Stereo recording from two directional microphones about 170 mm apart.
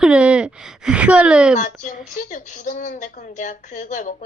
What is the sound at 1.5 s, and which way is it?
A woman's voice, 50° left (ahead or behind).